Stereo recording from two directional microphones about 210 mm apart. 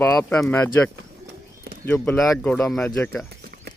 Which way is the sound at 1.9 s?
5° left (ahead or behind).